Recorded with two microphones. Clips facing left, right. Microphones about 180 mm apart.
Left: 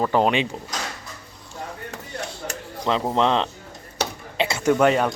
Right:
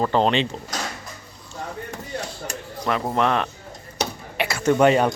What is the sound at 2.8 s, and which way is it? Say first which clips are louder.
Speech: left 1 dB; 20° left (ahead or behind).